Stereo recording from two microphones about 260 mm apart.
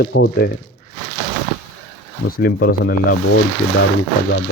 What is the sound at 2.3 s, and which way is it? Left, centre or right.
Speech, left.